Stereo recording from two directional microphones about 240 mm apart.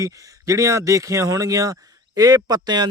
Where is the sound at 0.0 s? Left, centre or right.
Centre.